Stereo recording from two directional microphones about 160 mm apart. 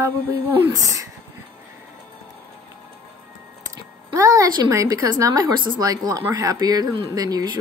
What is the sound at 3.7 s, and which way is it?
A woman's voice, 20° right (ahead or behind).